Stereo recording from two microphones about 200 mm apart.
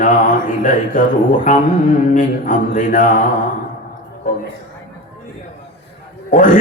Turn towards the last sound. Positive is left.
turn(degrees=40)  # may be behind; listen again after turning